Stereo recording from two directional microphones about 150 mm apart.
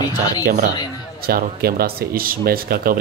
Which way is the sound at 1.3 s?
90° right.